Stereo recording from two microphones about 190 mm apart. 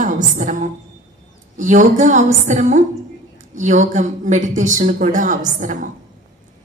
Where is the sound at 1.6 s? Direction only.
40° right (ahead or behind).